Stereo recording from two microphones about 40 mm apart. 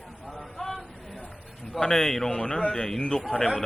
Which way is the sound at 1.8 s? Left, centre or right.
Centre.